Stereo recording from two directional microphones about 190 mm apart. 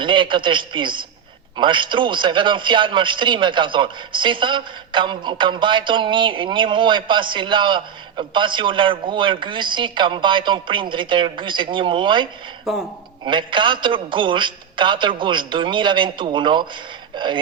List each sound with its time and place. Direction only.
0.0 s a man's voice: 25° right (ahead or behind)
12.7 s speech: centre (ahead or behind)
13.2 s a man's voice: 25° right (ahead or behind)